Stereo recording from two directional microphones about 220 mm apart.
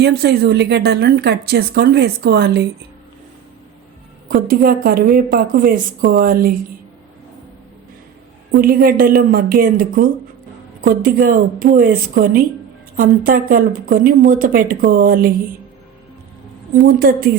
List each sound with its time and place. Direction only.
0.0 s speech: 45° right (ahead or behind)
4.3 s a woman's voice: 40° right (ahead or behind)
8.5 s a woman's voice: 40° right (ahead or behind)
16.7 s a woman's voice: 40° right (ahead or behind)